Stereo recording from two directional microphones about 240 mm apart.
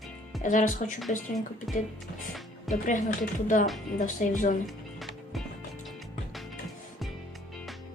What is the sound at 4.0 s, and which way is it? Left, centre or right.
Speech, left.